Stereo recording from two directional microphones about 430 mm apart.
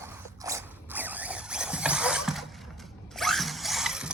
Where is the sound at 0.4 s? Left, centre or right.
Centre.